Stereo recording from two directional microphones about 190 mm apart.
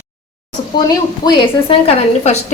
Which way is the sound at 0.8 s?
20° left (ahead or behind).